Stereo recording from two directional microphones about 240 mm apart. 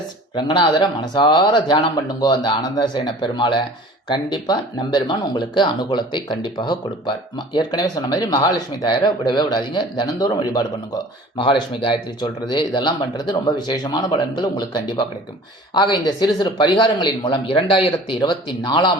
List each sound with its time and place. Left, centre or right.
0.3 s speech: centre